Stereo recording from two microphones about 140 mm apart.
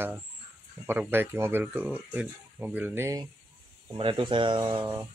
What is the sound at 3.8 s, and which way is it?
Speech, 35° right (ahead or behind).